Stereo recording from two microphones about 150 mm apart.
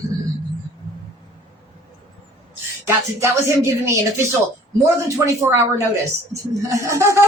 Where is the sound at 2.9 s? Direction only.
20° right (ahead or behind).